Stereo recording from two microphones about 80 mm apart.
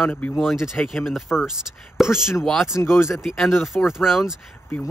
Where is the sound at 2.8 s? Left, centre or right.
Left.